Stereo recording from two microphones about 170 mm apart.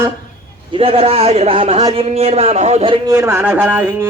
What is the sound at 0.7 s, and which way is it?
Speech, 35° right (ahead or behind).